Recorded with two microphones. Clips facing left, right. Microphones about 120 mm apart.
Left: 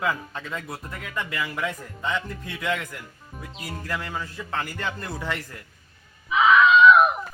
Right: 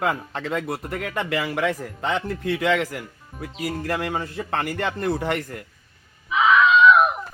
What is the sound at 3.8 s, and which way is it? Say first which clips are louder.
A man's voice: right 4 dB; 65° right (ahead or behind).